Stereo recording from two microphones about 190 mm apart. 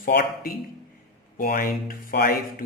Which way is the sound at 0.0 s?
50° left (ahead or behind).